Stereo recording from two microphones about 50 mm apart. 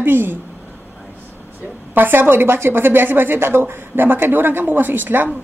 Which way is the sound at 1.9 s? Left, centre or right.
Right.